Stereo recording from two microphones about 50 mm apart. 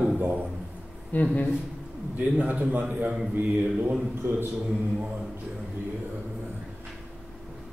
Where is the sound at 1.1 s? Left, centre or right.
Left.